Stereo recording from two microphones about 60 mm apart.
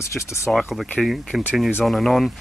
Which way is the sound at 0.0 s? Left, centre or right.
Left.